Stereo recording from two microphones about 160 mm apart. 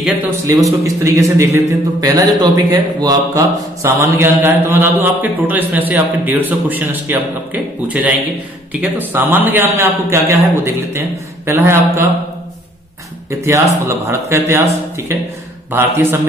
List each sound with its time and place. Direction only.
0.5 s speech: 20° right (ahead or behind)
13.3 s speech: 20° right (ahead or behind)